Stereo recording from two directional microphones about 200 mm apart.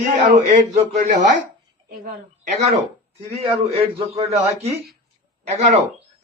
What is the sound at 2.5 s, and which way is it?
Speech, 35° right (ahead or behind).